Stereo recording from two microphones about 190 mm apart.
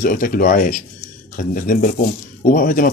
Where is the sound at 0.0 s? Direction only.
50° left (ahead or behind).